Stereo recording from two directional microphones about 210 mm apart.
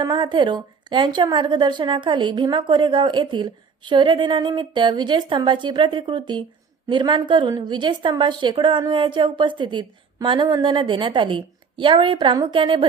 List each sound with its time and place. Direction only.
0.0 s a woman's voice: 20° right (ahead or behind)